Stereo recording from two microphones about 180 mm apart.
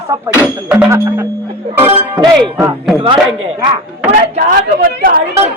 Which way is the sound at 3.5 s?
20° right (ahead or behind).